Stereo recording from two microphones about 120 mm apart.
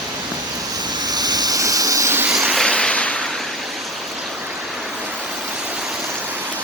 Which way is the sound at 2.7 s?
10° left (ahead or behind).